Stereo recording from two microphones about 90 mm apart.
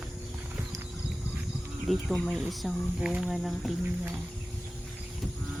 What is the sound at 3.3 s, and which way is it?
Speech, centre (ahead or behind).